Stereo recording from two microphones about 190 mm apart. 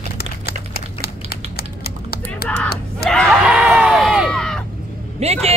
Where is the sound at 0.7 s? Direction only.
55° left (ahead or behind).